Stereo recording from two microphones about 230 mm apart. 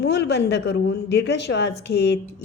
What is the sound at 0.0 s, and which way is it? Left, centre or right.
A woman's voice, left.